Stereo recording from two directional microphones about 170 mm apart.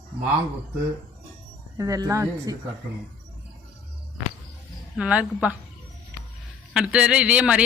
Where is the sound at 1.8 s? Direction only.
20° right (ahead or behind).